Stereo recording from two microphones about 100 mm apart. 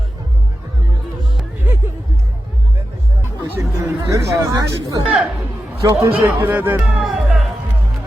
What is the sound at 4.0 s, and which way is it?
Chatter, 35° right (ahead or behind).